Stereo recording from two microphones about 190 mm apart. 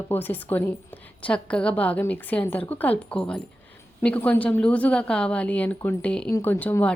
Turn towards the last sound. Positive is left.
turn(degrees=10)  # may be behind; listen again after turning